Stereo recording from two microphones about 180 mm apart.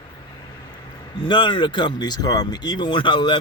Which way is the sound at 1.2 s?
25° left (ahead or behind).